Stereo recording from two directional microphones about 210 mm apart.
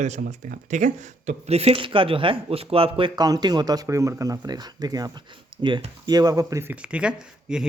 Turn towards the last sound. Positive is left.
turn(degrees=-5)  # may be behind; listen again after turning